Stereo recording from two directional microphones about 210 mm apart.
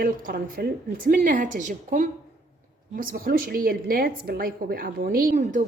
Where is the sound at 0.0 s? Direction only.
45° right (ahead or behind).